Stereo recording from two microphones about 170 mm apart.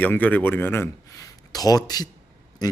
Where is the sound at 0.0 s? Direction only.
10° left (ahead or behind).